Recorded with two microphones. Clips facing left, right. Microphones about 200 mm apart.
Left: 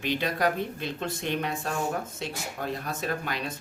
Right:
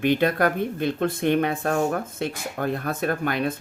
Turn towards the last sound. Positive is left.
turn(degrees=-55)  # may be behind; listen again after turning